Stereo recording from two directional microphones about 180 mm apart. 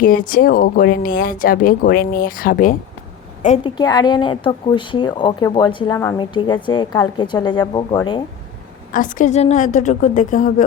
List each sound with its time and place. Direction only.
0.0 s speech: 50° left (ahead or behind)
3.6 s speech: 20° left (ahead or behind)
8.9 s speech: 45° left (ahead or behind)